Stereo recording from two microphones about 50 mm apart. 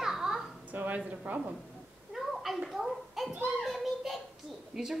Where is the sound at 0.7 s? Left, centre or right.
Right.